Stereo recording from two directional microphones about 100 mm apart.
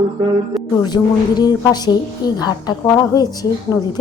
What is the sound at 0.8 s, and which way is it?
Speech, 45° left (ahead or behind).